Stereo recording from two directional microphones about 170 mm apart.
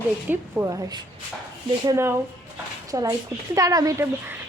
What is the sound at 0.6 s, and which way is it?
A woman's voice, 25° right (ahead or behind).